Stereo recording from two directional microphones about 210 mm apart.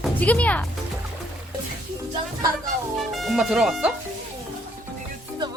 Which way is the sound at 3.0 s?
Centre (ahead or behind).